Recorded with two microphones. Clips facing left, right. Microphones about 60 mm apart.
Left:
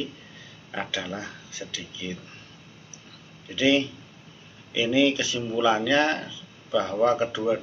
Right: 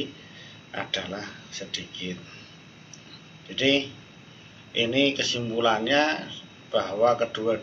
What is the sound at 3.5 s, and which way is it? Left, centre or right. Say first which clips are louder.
Speech: left 2 dB; centre.